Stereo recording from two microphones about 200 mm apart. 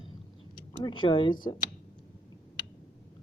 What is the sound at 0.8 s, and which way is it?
Speech, 25° left (ahead or behind).